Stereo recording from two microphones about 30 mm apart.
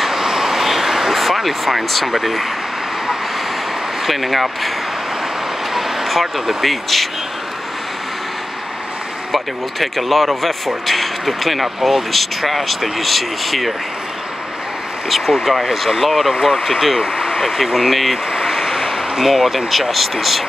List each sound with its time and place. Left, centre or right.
0.1 s vehicle: centre
2.1 s speech: centre
4.0 s speech: centre
5.7 s speech: centre
9.3 s speech: centre
15.0 s speech: centre
17.0 s vehicle: right
17.4 s speech: centre
18.3 s vehicle: centre
18.6 s a sound: centre
19.2 s speech: centre